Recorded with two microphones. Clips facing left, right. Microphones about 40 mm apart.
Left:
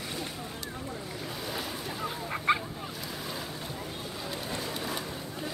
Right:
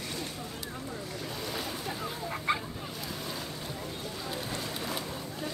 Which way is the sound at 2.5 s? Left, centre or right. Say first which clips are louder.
Left 4 dB; centre.